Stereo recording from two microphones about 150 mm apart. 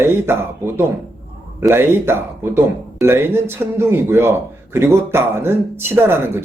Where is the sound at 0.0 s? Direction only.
15° right (ahead or behind).